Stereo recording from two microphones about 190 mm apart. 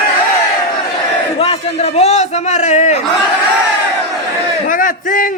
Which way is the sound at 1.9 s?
35° left (ahead or behind).